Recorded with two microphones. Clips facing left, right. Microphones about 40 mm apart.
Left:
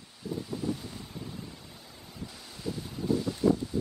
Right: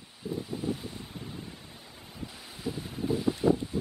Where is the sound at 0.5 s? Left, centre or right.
Centre.